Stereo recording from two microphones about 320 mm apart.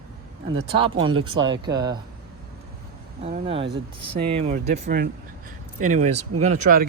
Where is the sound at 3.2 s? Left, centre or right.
Centre.